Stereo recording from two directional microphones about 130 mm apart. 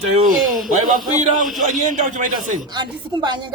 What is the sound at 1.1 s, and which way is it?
Speech, 60° right (ahead or behind).